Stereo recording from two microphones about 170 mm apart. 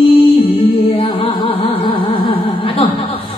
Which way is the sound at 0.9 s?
30° left (ahead or behind).